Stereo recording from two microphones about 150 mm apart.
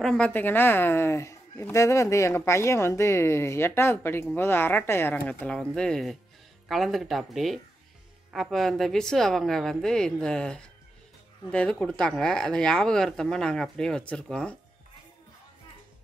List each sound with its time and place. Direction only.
0.0 s a woman's voice: 5° left (ahead or behind)